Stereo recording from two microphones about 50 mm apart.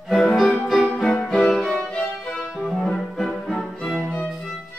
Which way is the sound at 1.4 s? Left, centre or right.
Centre.